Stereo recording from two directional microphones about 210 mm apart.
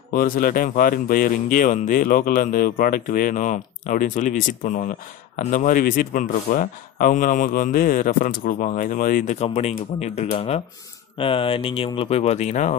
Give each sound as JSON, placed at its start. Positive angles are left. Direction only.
{"t": 0.1, "sound": "speech", "side_deg": 40}